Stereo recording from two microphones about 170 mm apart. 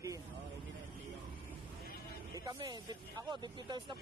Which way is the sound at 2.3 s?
25° right (ahead or behind).